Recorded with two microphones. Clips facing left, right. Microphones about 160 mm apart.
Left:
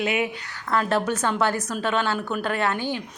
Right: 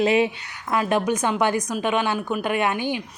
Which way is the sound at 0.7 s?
15° right (ahead or behind).